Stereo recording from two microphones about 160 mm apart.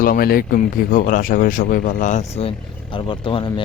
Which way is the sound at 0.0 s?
65° left (ahead or behind).